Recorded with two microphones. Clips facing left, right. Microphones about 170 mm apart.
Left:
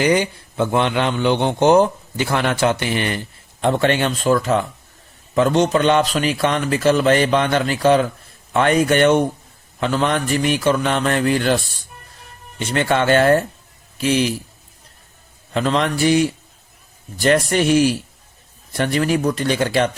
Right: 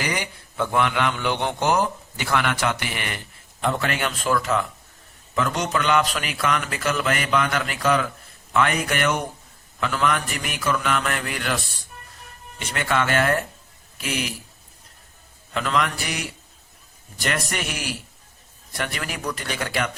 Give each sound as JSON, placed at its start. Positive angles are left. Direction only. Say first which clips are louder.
{"t": 0.0, "sound": "a man's voice", "louder": "left 11 dB", "side_deg": 30}
{"t": 15.5, "sound": "a man's voice", "louder": "left 5 dB", "side_deg": 30}